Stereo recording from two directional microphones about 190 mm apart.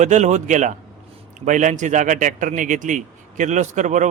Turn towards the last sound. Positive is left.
turn(degrees=-40)  # may be behind; listen again after turning